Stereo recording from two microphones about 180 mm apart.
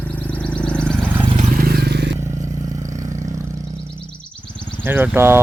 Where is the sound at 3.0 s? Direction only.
45° right (ahead or behind).